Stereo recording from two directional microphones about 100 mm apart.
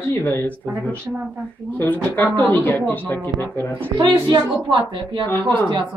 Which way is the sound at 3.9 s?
45° right (ahead or behind).